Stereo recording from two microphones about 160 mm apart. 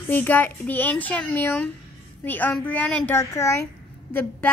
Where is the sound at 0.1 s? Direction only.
10° left (ahead or behind).